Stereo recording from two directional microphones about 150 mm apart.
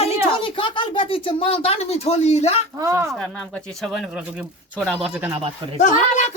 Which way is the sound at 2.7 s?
20° right (ahead or behind).